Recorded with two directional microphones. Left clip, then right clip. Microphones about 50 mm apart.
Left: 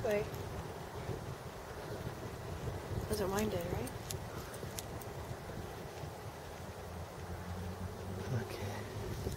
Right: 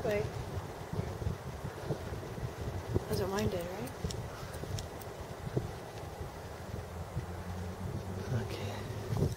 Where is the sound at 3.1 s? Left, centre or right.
Left.